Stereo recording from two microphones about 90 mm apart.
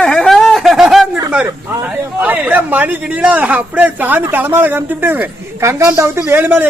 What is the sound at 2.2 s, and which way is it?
A man's voice, 20° right (ahead or behind).